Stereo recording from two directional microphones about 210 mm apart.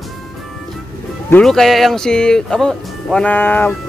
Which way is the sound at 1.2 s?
5° left (ahead or behind).